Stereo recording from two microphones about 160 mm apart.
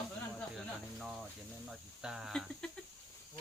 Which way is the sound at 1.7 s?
5° right (ahead or behind).